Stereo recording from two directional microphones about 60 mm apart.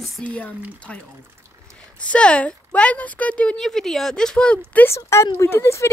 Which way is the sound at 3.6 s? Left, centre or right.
Centre.